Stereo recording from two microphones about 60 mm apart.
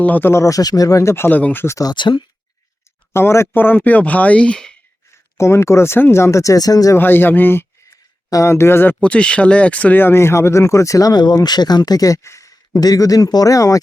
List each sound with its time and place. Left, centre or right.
0.0 s speech: left
0.4 s speech: left
1.1 s speech: left
1.4 s speech: left
3.1 s speech: left
3.5 s speech: left; by 4.7 s centre
5.4 s speech: left
6.9 s speech: left
9.0 s speech: left
10.0 s speech: left